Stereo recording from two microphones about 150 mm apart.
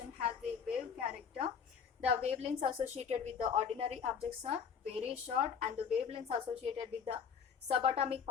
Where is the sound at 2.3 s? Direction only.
45° right (ahead or behind).